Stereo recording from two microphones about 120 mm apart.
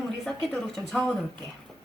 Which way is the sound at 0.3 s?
5° left (ahead or behind).